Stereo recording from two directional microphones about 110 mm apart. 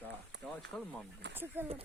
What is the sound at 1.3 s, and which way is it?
Speech, 20° right (ahead or behind).